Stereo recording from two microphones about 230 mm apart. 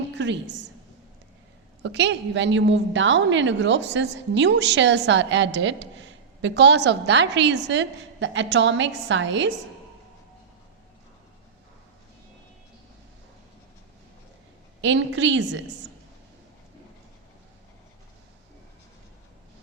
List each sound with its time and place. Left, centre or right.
0.1 s a woman's voice: right
1.8 s a woman's voice: right
14.8 s a woman's voice: right